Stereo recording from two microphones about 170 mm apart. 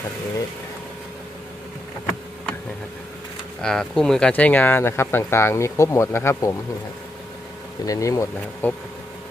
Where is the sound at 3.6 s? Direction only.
5° left (ahead or behind).